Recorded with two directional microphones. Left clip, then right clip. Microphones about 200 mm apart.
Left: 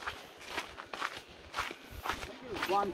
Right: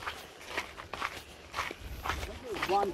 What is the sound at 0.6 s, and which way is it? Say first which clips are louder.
Walk: right 2 dB; 50° right (ahead or behind).